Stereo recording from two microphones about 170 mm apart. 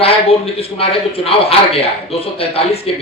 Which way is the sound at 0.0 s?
35° left (ahead or behind).